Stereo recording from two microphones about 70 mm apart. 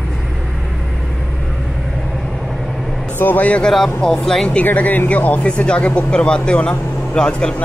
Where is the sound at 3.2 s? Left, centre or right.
Left.